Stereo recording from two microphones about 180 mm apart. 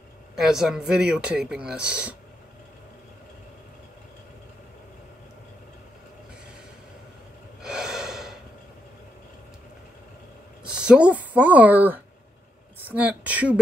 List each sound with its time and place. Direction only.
0.4 s speech: centre (ahead or behind)
7.6 s gasp: 5° right (ahead or behind)
10.6 s speech: 5° right (ahead or behind)